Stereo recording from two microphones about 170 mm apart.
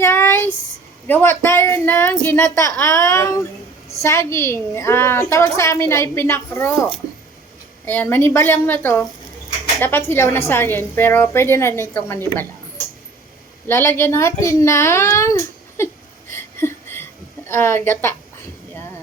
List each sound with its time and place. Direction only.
0.0 s a sound: 15° left (ahead or behind)
1.0 s a woman's voice: 10° left (ahead or behind)
7.9 s a woman's voice: 10° left (ahead or behind)
13.7 s a woman's voice: 15° left (ahead or behind)
16.3 s a sound: 15° left (ahead or behind)
17.5 s a woman's voice: 15° left (ahead or behind)